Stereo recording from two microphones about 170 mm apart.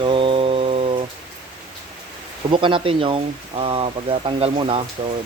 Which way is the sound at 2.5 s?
30° right (ahead or behind).